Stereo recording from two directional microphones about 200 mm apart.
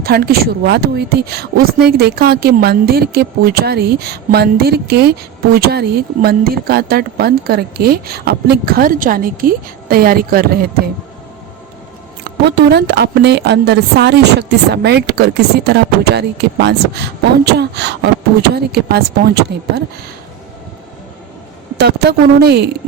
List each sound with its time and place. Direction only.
0.0 s a woman's voice: 50° right (ahead or behind)
12.5 s a woman's voice: 55° right (ahead or behind)
21.8 s a woman's voice: 55° right (ahead or behind)